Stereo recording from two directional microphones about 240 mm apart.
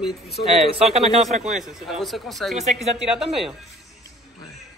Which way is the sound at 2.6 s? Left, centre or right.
Right.